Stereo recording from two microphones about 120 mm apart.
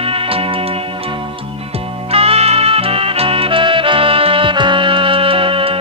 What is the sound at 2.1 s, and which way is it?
Music, 55° right (ahead or behind).